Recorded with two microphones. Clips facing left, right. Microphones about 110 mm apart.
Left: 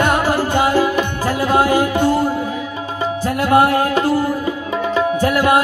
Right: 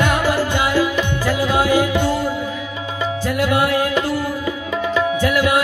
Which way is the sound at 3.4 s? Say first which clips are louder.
Left 5 dB; 40° left (ahead or behind).